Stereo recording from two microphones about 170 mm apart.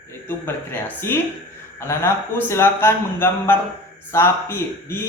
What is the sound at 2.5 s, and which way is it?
A man's voice, 15° left (ahead or behind).